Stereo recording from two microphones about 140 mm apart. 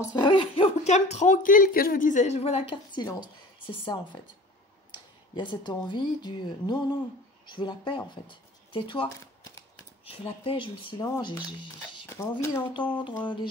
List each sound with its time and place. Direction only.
0.1 s speech: 35° left (ahead or behind)
5.3 s speech: 30° left (ahead or behind)
12.1 s speech: 20° left (ahead or behind)
13.2 s speech: 35° left (ahead or behind)